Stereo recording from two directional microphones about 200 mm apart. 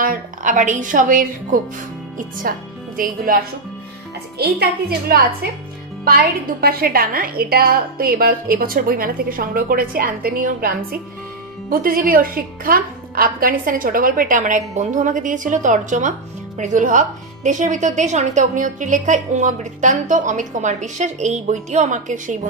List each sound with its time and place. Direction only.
0.0 s a woman's voice: 40° right (ahead or behind)